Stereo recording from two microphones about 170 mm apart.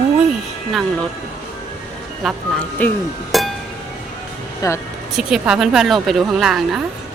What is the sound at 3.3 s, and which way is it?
Music, centre (ahead or behind).